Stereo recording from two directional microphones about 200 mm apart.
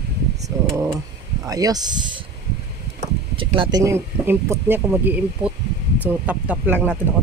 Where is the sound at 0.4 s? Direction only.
15° right (ahead or behind).